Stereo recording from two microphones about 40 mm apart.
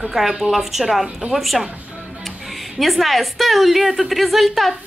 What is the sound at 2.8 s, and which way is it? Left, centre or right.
A woman's voice, centre.